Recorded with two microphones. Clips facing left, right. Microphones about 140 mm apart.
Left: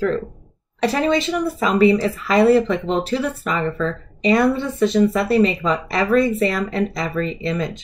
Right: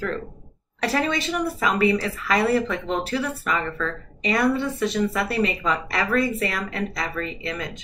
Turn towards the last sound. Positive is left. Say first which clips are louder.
# left 7 dB
turn(degrees=30)  # may be behind; listen again after turning